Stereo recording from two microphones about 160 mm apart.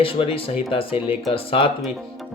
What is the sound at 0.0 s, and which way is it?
Speech, 35° left (ahead or behind).